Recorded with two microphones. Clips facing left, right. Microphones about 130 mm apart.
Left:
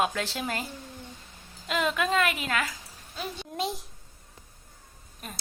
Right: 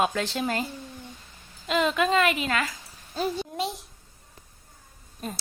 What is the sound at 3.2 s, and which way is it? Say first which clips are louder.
Speech: right 9 dB; 45° right (ahead or behind).